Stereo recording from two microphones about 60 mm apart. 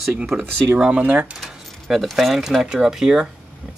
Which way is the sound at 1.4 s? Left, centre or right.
Centre.